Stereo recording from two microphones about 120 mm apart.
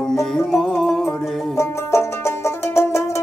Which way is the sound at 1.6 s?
20° left (ahead or behind).